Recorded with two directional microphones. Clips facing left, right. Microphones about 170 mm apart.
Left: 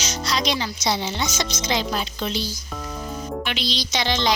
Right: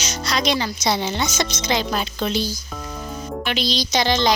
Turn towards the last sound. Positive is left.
turn(degrees=-40)  # may be behind; listen again after turning